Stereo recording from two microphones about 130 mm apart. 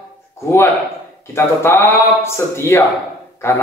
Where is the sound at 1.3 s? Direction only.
20° left (ahead or behind).